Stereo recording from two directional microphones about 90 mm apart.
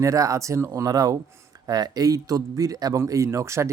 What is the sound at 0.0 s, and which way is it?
Speech, 40° right (ahead or behind).